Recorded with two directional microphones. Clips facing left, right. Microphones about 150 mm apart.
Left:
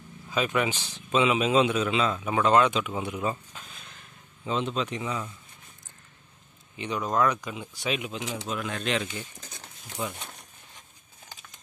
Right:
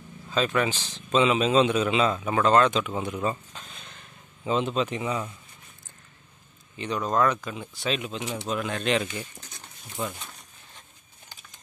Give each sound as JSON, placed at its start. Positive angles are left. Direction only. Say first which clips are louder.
{"t": 0.3, "sound": "speech", "louder": "right 2 dB", "side_deg": 10}
{"t": 1.8, "sound": "speech", "louder": "right 2 dB", "side_deg": 0}
{"t": 6.8, "sound": "speech", "louder": "right 1 dB", "side_deg": 10}
{"t": 8.5, "sound": "speech", "louder": "right 5 dB", "side_deg": 0}
{"t": 10.1, "sound": "a sound", "louder": "left 1 dB", "side_deg": 25}